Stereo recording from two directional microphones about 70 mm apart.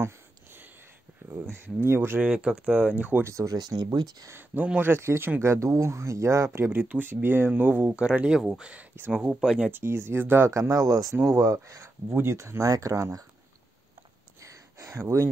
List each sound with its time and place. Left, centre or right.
0.0 s a sound: right
1.3 s speech: right
3.3 s speech: right
3.5 s speech: right
4.3 s speech: right
6.6 s speech: right; by 9.7 s centre
9.7 s speech: right
10.5 s speech: right
11.1 s speech: right
12.1 s speech: right
12.4 s speech: right
14.4 s a sound: right
15.0 s speech: right